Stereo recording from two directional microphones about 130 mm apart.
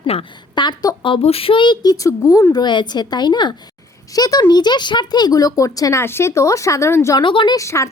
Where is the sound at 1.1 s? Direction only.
50° left (ahead or behind); by 7.2 s 20° left (ahead or behind).